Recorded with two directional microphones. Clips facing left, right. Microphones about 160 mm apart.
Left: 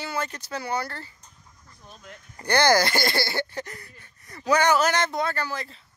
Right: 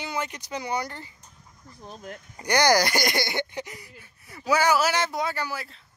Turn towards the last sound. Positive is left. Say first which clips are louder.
# left 1 dB
turn(degrees=-5)  # may be behind; listen again after turning